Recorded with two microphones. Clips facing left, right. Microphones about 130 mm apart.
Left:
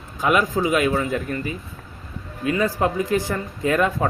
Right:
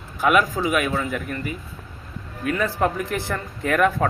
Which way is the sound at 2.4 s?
5° left (ahead or behind).